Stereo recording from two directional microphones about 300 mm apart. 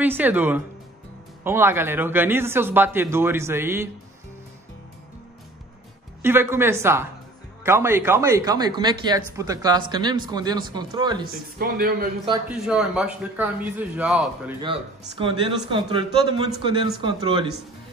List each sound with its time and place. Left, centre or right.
0.0 s a man's voice: centre
6.2 s a man's voice: centre
11.5 s speech: right
12.4 s a man's voice: centre
14.6 s a man's voice: centre